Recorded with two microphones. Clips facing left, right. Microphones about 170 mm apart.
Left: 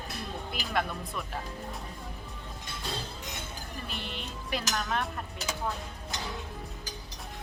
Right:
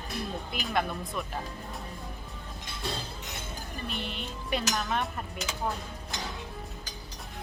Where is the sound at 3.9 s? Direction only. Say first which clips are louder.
Right 3 dB; centre (ahead or behind).